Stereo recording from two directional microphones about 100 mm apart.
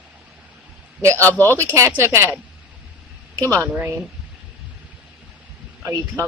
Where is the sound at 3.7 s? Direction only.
15° right (ahead or behind).